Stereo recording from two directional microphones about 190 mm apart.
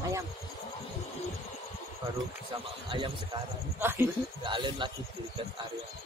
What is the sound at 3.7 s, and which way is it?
Speech, 10° right (ahead or behind).